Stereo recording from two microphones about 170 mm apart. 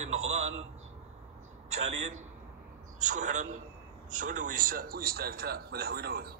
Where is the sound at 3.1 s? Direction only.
45° right (ahead or behind).